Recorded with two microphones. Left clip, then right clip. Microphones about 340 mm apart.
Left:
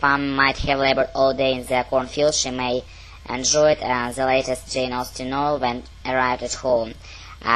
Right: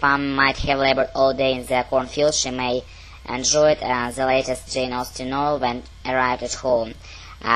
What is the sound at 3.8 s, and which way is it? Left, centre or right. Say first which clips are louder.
Speech: even; left.